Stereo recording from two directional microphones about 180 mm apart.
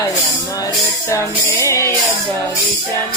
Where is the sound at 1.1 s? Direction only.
15° left (ahead or behind).